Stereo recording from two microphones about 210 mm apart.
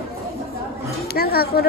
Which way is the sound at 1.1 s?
45° left (ahead or behind).